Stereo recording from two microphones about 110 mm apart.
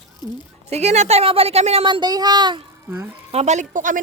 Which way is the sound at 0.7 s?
85° right.